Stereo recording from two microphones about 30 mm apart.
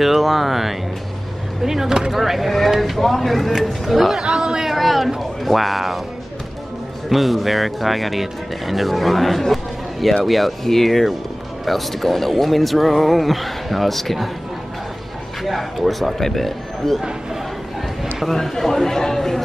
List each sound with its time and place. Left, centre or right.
0.0 s speech: centre
2.1 s speech: centre
4.2 s speech: right
4.6 s a sound: centre
5.4 s speech: centre
7.1 s speech: centre
9.5 s a sound: centre
10.2 s speech: centre
15.4 s speech: centre
18.3 s speech: centre